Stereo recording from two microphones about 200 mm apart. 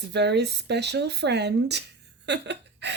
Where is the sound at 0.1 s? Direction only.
55° right (ahead or behind).